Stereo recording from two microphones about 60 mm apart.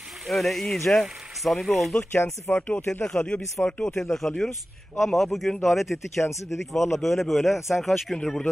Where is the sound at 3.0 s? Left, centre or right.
Centre.